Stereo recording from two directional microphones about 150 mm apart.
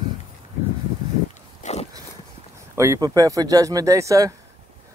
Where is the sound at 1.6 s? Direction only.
55° left (ahead or behind).